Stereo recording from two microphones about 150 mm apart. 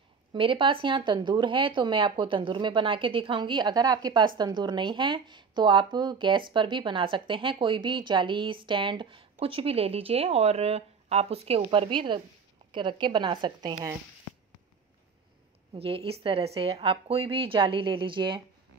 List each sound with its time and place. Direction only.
0.3 s speech: 35° right (ahead or behind)
15.7 s speech: 40° right (ahead or behind)